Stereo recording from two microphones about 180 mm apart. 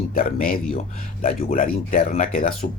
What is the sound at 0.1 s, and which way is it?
Speech, 50° left (ahead or behind).